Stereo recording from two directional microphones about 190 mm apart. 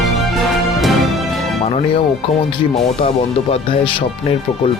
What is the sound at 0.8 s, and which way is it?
Music, centre (ahead or behind).